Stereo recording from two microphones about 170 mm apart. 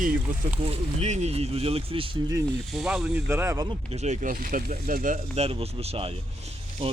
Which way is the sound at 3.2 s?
15° right (ahead or behind).